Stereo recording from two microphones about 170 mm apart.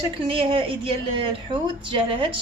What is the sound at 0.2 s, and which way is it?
A woman's voice, 30° right (ahead or behind).